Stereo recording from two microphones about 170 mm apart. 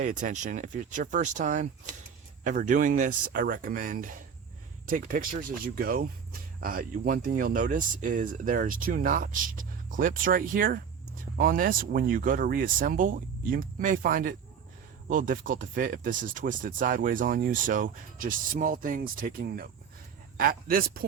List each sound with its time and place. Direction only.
0.0 s speech: 50° right (ahead or behind)